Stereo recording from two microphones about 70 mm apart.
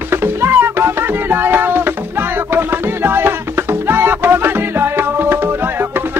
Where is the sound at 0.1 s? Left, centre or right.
Right.